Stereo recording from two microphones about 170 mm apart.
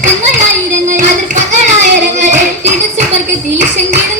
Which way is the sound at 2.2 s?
45° right (ahead or behind).